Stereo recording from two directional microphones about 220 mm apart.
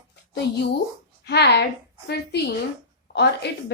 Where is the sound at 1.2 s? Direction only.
50° left (ahead or behind).